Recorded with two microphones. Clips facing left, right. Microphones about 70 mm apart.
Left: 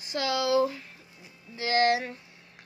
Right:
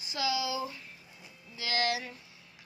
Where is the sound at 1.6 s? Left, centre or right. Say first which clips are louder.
Left 8 dB; left.